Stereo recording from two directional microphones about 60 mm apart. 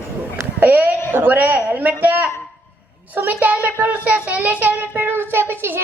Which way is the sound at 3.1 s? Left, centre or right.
Right.